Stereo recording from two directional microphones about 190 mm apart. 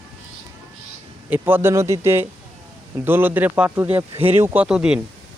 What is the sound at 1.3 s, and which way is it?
Speech, 10° right (ahead or behind).